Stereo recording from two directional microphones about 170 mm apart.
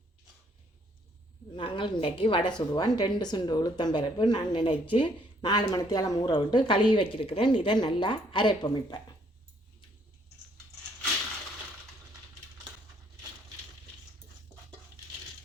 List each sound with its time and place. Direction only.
1.5 s speech: 30° left (ahead or behind)